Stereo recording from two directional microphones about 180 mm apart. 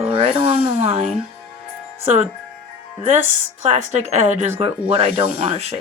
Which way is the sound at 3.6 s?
40° right (ahead or behind).